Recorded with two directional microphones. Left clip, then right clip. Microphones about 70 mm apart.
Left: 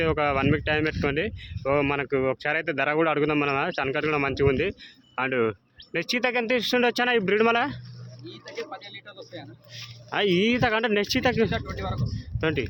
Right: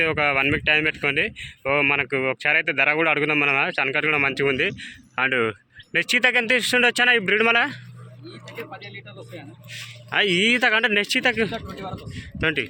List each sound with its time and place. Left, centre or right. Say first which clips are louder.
0.0 s speech: right 4 dB; left
9.7 s speech: right 6 dB; left
11.5 s speech: left 1 dB; centre
12.1 s a man's voice: right 5 dB; left